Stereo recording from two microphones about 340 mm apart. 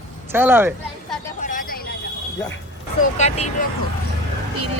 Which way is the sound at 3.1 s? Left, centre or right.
Centre.